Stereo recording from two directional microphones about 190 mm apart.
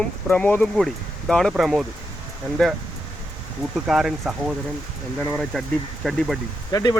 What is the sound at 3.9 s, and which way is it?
Speech, centre (ahead or behind).